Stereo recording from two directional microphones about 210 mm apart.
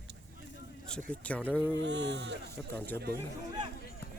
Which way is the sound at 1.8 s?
55° right (ahead or behind).